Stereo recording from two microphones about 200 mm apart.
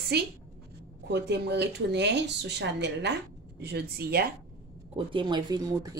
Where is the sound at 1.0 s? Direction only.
55° right (ahead or behind).